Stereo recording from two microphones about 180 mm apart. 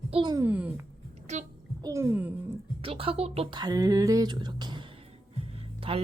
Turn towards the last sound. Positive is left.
turn(degrees=-30)  # may be behind; listen again after turning